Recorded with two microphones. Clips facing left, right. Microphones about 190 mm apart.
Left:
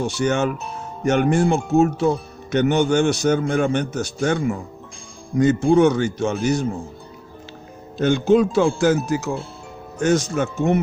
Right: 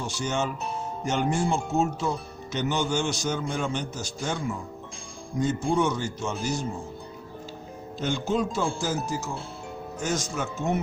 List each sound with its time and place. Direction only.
0.1 s speech: 65° left (ahead or behind)
7.9 s speech: 70° left (ahead or behind)